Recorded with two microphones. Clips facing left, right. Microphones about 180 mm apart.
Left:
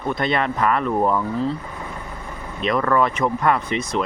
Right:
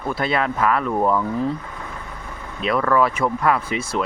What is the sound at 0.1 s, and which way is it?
Speech, 5° right (ahead or behind).